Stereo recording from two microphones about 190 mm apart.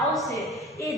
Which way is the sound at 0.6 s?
15° left (ahead or behind).